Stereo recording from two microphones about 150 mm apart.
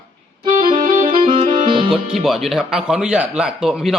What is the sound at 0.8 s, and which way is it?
Music, 65° right (ahead or behind).